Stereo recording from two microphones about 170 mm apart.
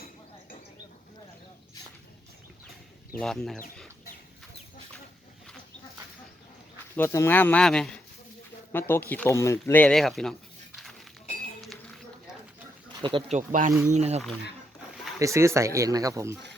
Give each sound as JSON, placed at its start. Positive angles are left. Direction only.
{"t": 3.2, "sound": "speech", "side_deg": 5}
{"t": 6.9, "sound": "speech", "side_deg": 15}
{"t": 13.0, "sound": "speech", "side_deg": -30}
{"t": 13.3, "sound": "speech", "side_deg": -50}
{"t": 15.2, "sound": "speech", "side_deg": -15}